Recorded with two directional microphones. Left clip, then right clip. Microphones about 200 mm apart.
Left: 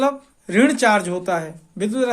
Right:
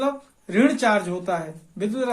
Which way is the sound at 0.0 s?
40° left (ahead or behind).